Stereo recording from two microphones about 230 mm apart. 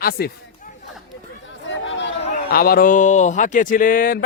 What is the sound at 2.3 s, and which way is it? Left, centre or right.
Speech, left.